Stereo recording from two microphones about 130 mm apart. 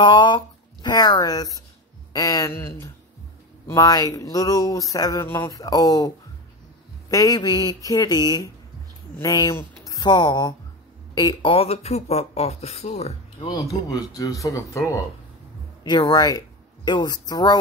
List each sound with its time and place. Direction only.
0.0 s a sound: 35° left (ahead or behind)
0.8 s speech: 30° left (ahead or behind)
11.5 s speech: 50° left (ahead or behind)
13.4 s speech: 30° left (ahead or behind)